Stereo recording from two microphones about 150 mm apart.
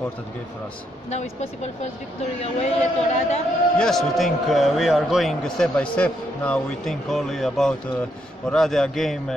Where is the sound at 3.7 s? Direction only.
5° left (ahead or behind).